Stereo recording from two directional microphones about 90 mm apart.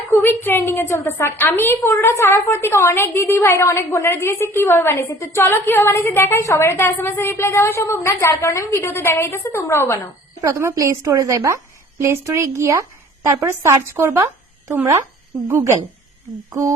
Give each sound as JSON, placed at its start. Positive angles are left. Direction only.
{"t": 0.1, "sound": "a woman's voice", "side_deg": 25}
{"t": 10.4, "sound": "a woman's voice", "side_deg": -35}
{"t": 16.5, "sound": "a woman's voice", "side_deg": -35}